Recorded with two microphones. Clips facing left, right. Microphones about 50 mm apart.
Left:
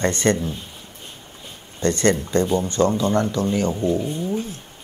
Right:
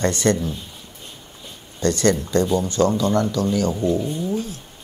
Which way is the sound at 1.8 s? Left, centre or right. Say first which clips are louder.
Even; left.